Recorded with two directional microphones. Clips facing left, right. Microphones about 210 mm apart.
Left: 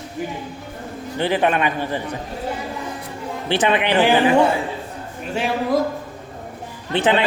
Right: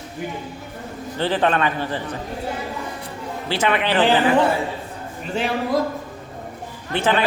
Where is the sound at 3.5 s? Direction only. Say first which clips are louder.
Left 2 dB; 20° left (ahead or behind).